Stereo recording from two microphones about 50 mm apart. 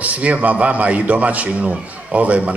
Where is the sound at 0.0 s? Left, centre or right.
Right.